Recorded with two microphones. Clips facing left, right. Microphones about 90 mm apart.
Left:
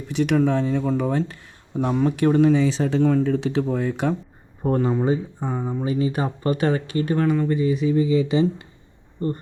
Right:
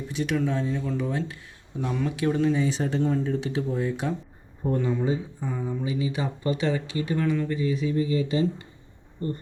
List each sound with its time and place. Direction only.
0.1 s speech: 65° left (ahead or behind)
1.8 s speech: 40° left (ahead or behind)
2.1 s speech: 60° left (ahead or behind)
4.8 s speech: 45° left (ahead or behind)
7.5 s speech: 65° left (ahead or behind)